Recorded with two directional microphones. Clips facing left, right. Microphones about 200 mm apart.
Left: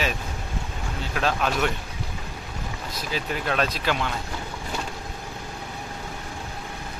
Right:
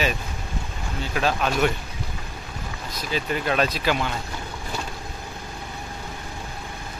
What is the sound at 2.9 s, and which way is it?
Speech, centre (ahead or behind).